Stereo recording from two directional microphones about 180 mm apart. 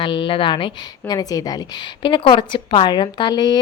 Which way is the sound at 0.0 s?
25° left (ahead or behind).